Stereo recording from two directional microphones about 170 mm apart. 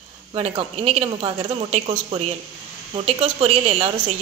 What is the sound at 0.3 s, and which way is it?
A woman's voice, 30° right (ahead or behind).